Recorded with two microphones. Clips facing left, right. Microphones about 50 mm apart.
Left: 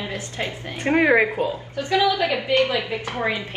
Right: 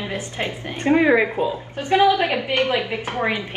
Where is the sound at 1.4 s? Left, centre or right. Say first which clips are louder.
Right 2 dB; right.